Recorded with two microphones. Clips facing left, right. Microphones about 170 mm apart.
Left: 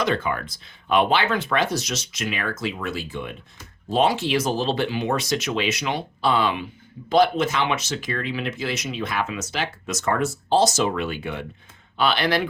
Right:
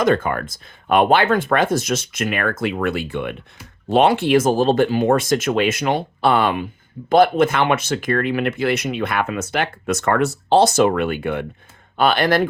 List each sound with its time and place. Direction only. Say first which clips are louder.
0.0 s speech: right 6 dB; 50° right (ahead or behind)